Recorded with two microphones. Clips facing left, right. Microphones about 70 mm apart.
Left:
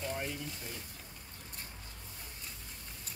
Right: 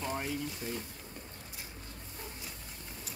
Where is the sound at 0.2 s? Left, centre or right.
Centre.